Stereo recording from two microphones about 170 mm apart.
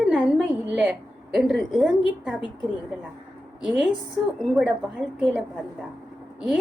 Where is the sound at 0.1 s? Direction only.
5° right (ahead or behind).